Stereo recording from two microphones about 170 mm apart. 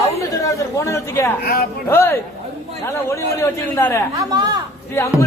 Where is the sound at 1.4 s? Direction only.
65° left (ahead or behind).